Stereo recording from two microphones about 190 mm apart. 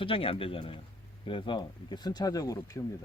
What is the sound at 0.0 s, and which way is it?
Speech, 30° left (ahead or behind).